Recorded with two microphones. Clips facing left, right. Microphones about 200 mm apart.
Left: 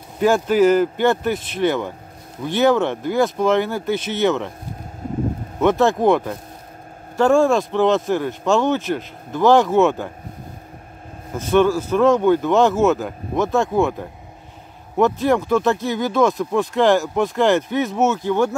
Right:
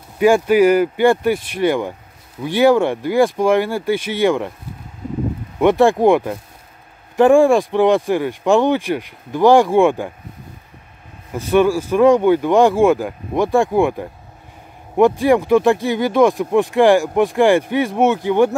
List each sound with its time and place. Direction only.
0.2 s speech: 10° right (ahead or behind)
5.6 s speech: 15° right (ahead or behind)
11.5 s speech: 10° right (ahead or behind)
15.0 s speech: 10° right (ahead or behind)